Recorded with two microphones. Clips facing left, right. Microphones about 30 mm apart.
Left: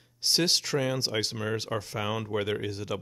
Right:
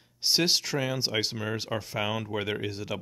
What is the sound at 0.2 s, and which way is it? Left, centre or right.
Speech, centre.